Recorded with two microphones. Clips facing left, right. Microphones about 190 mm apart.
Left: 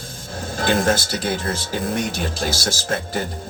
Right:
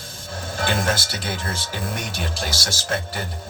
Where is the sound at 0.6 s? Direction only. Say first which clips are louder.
Left 5 dB; 40° left (ahead or behind).